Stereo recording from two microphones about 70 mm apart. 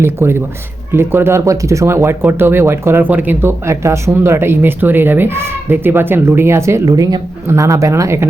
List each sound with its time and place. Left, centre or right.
0.0 s speech: right
3.0 s speech: right
3.7 s speech: right
6.8 s speech: right
7.4 s speech: right